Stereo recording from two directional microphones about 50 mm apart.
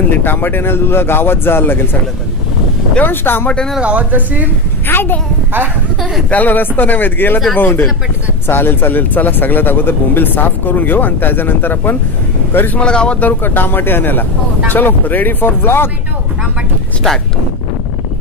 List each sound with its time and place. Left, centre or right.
0.1 s speech: left
3.0 s speech: left
3.4 s speech: centre
3.8 s a woman's voice: right
4.8 s speech: left
6.3 s speech: left
12.8 s speech: centre
13.2 s speech: left